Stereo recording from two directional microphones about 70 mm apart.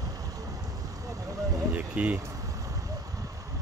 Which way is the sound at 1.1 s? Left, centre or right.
Right.